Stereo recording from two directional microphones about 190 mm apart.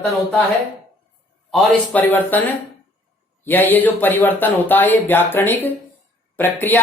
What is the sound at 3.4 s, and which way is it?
Speech, 10° left (ahead or behind).